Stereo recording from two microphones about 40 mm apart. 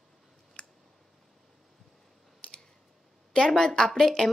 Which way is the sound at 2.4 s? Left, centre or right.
Left.